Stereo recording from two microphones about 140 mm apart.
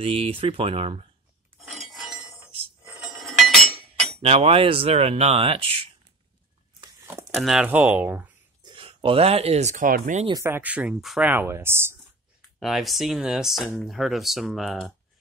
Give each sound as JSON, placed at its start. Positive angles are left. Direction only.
{"t": 0.0, "sound": "speech", "side_deg": -40}
{"t": 1.6, "sound": "chink", "side_deg": 0}
{"t": 3.3, "sound": "chink", "side_deg": 0}
{"t": 4.2, "sound": "speech", "side_deg": -45}
{"t": 7.2, "sound": "speech", "side_deg": 0}
{"t": 8.6, "sound": "speech", "side_deg": -40}
{"t": 10.4, "sound": "speech", "side_deg": -15}
{"t": 11.2, "sound": "speech", "side_deg": -15}
{"t": 12.5, "sound": "speech", "side_deg": 0}